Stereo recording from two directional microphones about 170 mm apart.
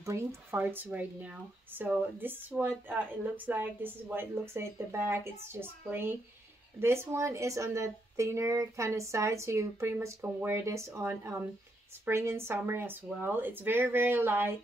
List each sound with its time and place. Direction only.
0.0 s speech: 15° right (ahead or behind)